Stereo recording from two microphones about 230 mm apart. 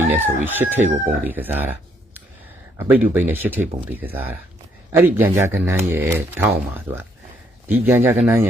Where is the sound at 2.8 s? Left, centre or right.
Centre.